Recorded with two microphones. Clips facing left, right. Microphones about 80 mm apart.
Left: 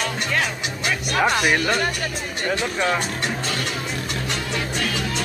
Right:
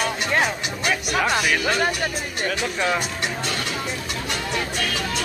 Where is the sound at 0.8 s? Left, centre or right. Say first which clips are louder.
Left 1 dB; centre.